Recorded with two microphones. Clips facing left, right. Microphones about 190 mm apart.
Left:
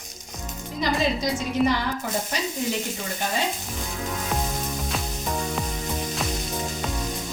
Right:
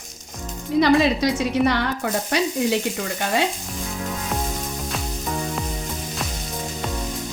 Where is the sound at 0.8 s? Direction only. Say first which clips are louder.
Right 7 dB; 70° right (ahead or behind).